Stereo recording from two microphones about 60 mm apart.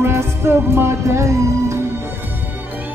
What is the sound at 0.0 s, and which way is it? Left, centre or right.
Music, right.